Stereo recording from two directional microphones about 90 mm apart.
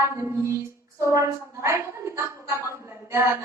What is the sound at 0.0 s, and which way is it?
Music, 30° right (ahead or behind).